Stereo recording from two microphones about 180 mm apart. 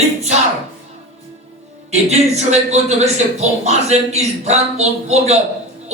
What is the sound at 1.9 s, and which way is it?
A man's voice, 40° right (ahead or behind).